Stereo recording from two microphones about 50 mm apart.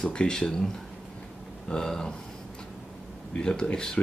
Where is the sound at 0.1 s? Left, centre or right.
Centre.